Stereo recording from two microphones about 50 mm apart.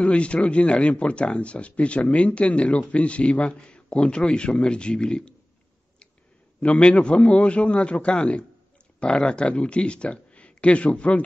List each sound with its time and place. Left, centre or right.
0.0 s speech: left
6.6 s speech: left